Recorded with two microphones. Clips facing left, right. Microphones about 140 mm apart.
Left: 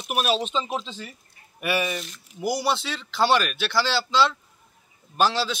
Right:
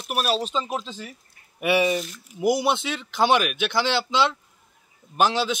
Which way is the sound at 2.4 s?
20° right (ahead or behind).